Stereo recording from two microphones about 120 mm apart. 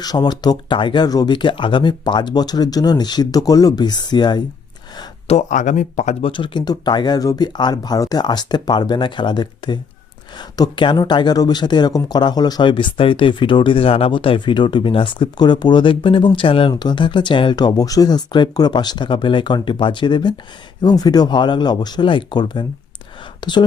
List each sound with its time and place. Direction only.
0.0 s speech: 35° left (ahead or behind)
5.3 s speech: 85° left
6.2 s speech: 45° left (ahead or behind)